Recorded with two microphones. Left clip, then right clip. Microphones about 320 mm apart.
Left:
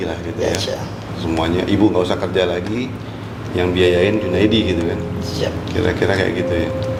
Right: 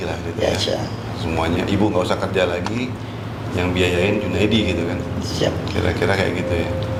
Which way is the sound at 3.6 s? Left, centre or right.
Right.